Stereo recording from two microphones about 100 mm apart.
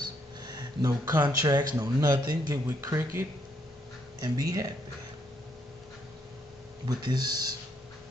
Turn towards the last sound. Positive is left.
turn(degrees=-40)  # may be behind; listen again after turning